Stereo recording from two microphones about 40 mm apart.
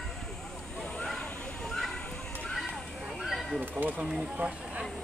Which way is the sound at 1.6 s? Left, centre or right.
Centre.